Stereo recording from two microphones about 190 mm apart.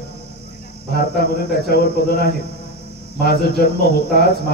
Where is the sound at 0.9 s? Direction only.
55° left (ahead or behind).